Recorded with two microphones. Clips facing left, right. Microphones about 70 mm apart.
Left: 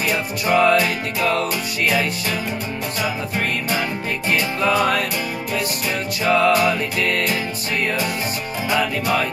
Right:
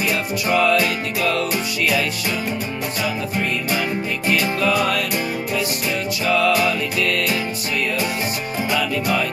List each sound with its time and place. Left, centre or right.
0.5 s music: left
4.3 s music: left
6.2 s music: left